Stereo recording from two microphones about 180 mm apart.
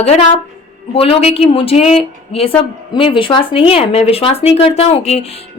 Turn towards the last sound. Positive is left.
turn(degrees=35)  # may be behind; listen again after turning